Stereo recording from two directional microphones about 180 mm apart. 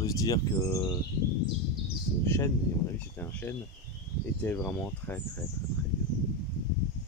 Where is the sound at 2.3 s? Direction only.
15° left (ahead or behind).